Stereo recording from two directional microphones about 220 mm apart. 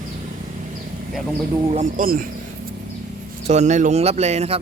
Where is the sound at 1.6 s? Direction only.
30° right (ahead or behind).